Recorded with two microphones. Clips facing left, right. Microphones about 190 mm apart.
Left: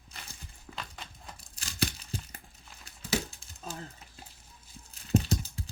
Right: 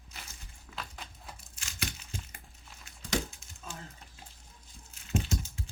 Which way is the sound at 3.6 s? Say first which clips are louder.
Left 4 dB; 35° left (ahead or behind).